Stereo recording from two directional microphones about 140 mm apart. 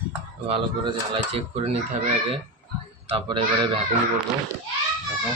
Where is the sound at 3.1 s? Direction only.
40° right (ahead or behind).